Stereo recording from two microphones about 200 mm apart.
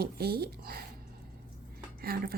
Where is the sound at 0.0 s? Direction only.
50° right (ahead or behind).